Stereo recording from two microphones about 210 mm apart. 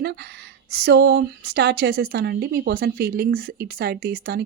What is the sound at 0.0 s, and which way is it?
A woman's voice, 50° right (ahead or behind).